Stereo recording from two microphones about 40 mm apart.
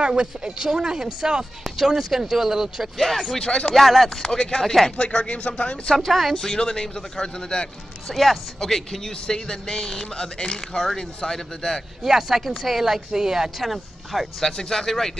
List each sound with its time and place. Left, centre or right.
0.0 s speech: right; by 2.9 s centre
3.3 s speech: centre
3.7 s speech: centre
4.2 s speech: centre
4.9 s speech: left
5.9 s speech: centre
6.3 s speech: centre
8.1 s speech: centre
12.0 s speech: centre
12.8 s speech: centre
13.6 s speech: centre
14.4 s speech: centre